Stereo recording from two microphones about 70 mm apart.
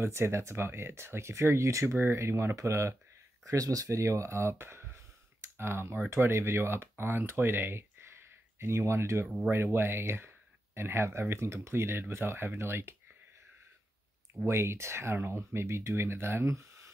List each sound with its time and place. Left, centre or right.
0.0 s speech: right
3.4 s speech: right
14.4 s speech: right